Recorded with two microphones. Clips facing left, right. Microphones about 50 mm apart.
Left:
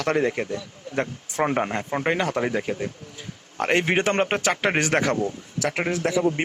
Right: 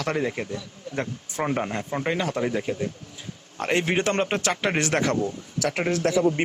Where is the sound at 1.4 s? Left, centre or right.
Left.